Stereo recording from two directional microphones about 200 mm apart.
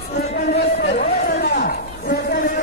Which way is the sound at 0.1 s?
40° left (ahead or behind).